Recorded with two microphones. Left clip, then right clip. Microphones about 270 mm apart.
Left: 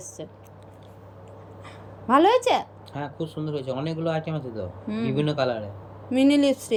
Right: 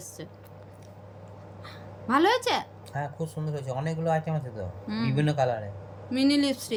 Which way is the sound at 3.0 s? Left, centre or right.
Right.